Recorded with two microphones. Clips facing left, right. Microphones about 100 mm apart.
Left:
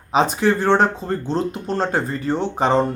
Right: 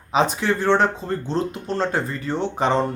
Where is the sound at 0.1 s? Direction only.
40° left (ahead or behind).